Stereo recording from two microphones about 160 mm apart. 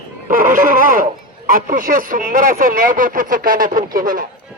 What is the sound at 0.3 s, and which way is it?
Speech, 55° right (ahead or behind).